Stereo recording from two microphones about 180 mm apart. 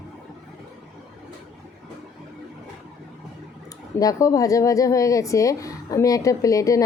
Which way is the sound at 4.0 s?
20° left (ahead or behind).